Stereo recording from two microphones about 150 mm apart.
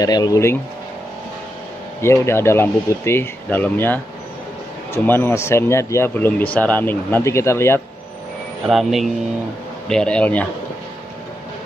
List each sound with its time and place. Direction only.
0.0 s speech: 25° left (ahead or behind)
2.0 s speech: 20° left (ahead or behind)
8.6 s speech: centre (ahead or behind)